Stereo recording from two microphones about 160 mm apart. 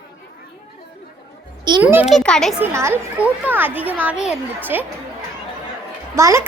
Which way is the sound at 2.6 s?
15° right (ahead or behind).